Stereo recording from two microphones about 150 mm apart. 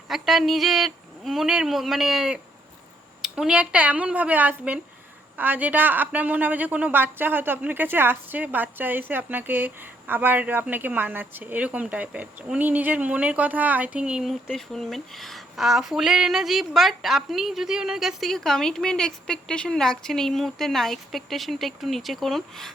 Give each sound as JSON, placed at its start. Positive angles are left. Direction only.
{"t": 0.1, "sound": "a woman's voice", "side_deg": 0}